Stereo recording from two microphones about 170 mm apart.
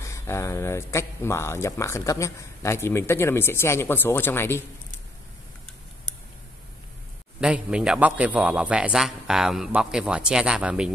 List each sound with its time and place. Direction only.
0.0 s speech: 15° left (ahead or behind)
7.3 s a man's voice: 5° right (ahead or behind)